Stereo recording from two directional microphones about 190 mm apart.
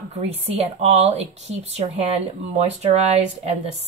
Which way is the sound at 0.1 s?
35° right (ahead or behind).